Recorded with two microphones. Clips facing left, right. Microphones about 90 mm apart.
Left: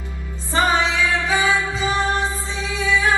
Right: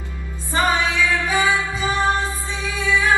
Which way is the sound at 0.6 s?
20° left (ahead or behind).